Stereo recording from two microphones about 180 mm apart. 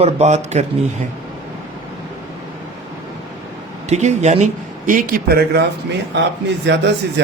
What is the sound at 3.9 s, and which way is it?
Speech, 40° right (ahead or behind).